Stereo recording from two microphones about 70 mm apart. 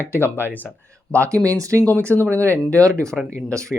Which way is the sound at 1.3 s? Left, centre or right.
Right.